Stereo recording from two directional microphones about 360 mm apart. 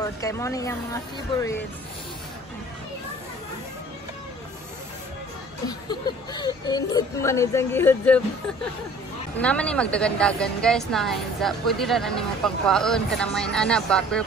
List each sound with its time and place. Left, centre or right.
0.0 s speech: centre
5.7 s speech: centre
9.4 s a woman's voice: centre